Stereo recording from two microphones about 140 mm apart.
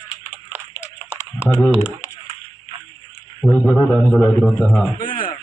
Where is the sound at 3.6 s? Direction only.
10° left (ahead or behind).